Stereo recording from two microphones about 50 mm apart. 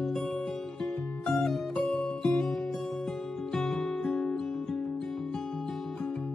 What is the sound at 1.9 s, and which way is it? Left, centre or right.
Music, centre.